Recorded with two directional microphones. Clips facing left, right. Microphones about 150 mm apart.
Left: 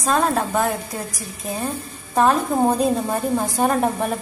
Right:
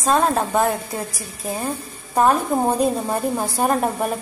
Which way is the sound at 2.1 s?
10° right (ahead or behind).